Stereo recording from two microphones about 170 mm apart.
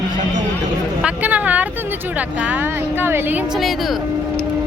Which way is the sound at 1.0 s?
10° right (ahead or behind).